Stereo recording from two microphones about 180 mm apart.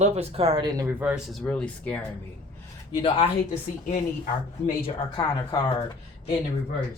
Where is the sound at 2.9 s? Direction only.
30° left (ahead or behind).